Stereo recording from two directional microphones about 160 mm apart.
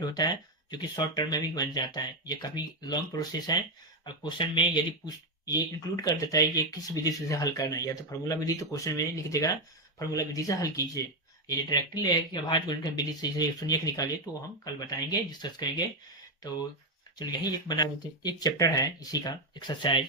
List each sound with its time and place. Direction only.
0.0 s speech: 25° left (ahead or behind)
17.2 s speech: 25° left (ahead or behind)